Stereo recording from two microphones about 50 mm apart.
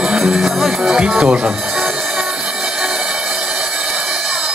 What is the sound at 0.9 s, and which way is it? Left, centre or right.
Speech, centre.